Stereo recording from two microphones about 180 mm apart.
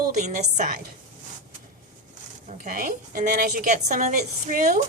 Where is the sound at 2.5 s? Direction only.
45° right (ahead or behind).